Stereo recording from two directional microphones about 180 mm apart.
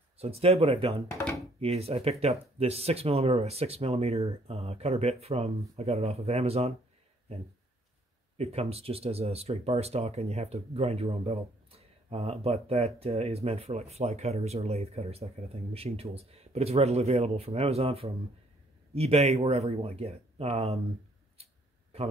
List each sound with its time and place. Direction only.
0.2 s speech: 35° right (ahead or behind)
1.1 s speech: 15° left (ahead or behind)
1.6 s speech: 35° right (ahead or behind)
8.4 s speech: 35° right (ahead or behind)